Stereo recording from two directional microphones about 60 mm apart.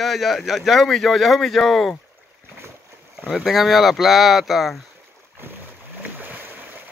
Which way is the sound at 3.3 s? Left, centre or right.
Centre.